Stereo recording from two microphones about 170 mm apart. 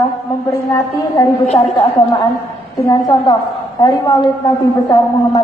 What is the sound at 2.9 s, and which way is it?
A woman's voice, 25° left (ahead or behind).